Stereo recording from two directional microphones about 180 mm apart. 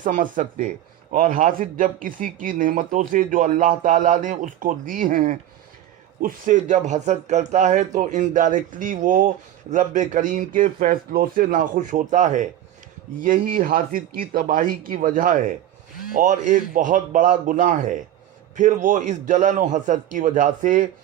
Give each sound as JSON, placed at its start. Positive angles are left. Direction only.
{"t": 0.0, "sound": "speech", "side_deg": -45}